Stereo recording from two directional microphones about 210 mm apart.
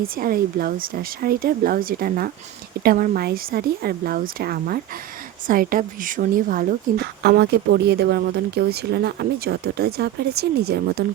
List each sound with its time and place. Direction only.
0.2 s a woman's voice: 45° right (ahead or behind)